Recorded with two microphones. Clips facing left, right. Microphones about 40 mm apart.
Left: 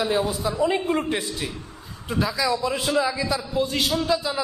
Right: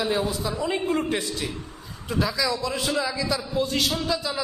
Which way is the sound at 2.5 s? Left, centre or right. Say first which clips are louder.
Left 3 dB; left.